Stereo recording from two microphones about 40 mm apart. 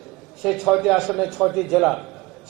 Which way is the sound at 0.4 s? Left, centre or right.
Centre.